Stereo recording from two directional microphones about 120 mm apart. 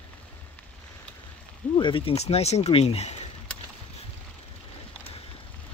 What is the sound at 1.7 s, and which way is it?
Speech, 45° left (ahead or behind).